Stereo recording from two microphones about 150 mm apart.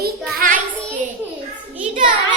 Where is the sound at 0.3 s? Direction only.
65° right (ahead or behind).